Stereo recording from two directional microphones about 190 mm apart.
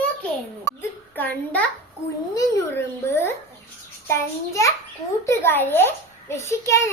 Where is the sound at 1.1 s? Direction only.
10° left (ahead or behind).